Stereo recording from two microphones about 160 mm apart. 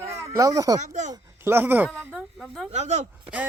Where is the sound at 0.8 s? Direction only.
50° right (ahead or behind).